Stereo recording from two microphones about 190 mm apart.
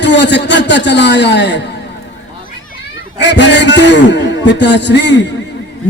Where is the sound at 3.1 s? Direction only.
65° left (ahead or behind).